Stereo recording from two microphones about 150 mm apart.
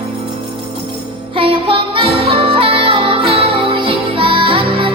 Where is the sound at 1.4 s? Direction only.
35° right (ahead or behind).